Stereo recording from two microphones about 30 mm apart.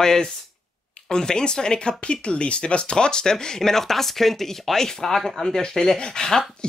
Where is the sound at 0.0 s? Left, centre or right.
Centre.